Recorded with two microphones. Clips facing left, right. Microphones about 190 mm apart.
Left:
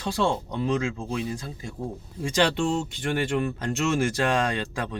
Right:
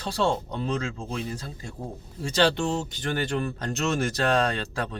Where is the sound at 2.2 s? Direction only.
35° right (ahead or behind).